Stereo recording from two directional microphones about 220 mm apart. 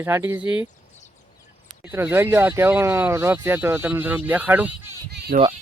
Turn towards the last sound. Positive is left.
turn(degrees=-35)  # may be behind; listen again after turning